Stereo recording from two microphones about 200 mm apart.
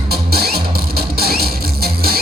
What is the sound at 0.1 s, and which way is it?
Music, 50° right (ahead or behind).